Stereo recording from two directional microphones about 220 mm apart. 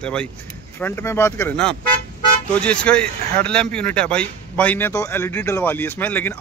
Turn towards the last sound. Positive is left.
turn(degrees=10)  # may be behind; listen again after turning